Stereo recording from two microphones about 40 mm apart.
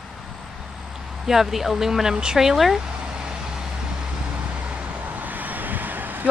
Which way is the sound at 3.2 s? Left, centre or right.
Centre.